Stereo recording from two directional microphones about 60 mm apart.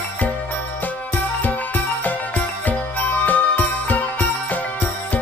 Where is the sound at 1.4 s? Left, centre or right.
Left.